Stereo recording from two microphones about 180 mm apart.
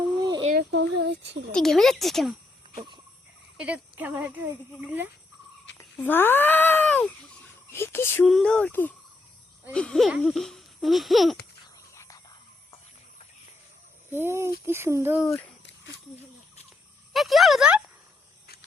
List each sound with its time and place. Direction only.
0.0 s a sound: 25° right (ahead or behind)
0.5 s speech: 80° right
1.5 s speech: centre (ahead or behind)
3.6 s speech: 10° right (ahead or behind)
5.7 s speech: 10° left (ahead or behind)
11.9 s whispering: 20° left (ahead or behind)
14.1 s speech: 15° right (ahead or behind)
15.3 s speech: 10° left (ahead or behind)
15.6 s a sound: 80° left
17.1 s a sound: centre (ahead or behind)